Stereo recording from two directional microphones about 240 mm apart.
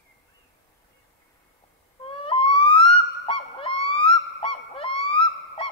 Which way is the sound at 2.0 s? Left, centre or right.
Left.